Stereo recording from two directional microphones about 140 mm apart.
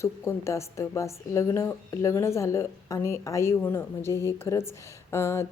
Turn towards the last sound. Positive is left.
turn(degrees=20)  # may be behind; listen again after turning